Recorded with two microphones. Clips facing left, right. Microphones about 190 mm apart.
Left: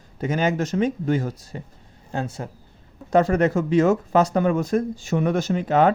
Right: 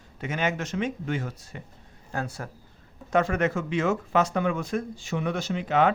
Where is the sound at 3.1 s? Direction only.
35° left (ahead or behind).